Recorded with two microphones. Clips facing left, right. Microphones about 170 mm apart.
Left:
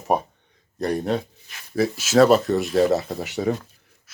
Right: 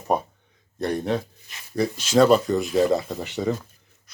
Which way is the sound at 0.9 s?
5° left (ahead or behind).